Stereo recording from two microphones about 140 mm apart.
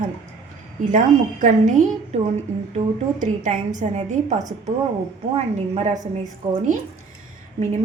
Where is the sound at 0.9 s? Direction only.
65° right (ahead or behind).